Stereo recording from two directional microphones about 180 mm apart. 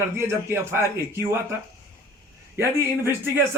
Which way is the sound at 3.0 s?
15° right (ahead or behind).